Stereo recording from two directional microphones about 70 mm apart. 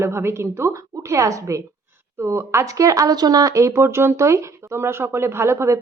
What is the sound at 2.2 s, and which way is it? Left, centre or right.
Speech, right.